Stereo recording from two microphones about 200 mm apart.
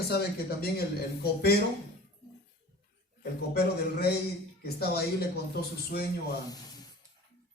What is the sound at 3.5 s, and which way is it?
A man's voice, 50° left (ahead or behind).